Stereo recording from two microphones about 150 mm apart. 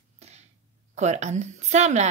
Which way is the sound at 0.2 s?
45° right (ahead or behind).